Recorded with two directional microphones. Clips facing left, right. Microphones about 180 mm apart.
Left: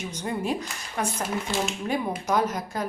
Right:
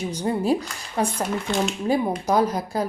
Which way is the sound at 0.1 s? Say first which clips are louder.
Right 6 dB; 35° right (ahead or behind).